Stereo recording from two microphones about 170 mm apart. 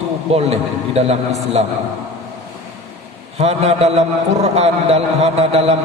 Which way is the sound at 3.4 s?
40° right (ahead or behind).